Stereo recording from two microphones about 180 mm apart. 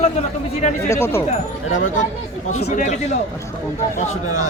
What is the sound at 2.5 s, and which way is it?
Speech, 40° left (ahead or behind).